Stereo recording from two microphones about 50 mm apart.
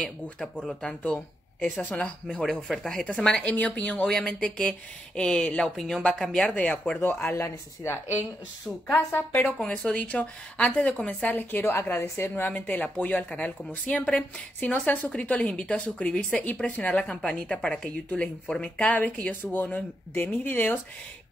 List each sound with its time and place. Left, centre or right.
0.0 s a woman's voice: centre
1.6 s a woman's voice: left
3.4 s a woman's voice: left
4.0 s speech: centre
6.5 s a woman's voice: left
7.3 s speech: left
8.9 s a woman's voice: left
9.7 s a woman's voice: left
11.2 s a woman's voice: left; by 14.2 s centre
14.6 s a woman's voice: left
17.0 s a woman's voice: centre; by 20.8 s left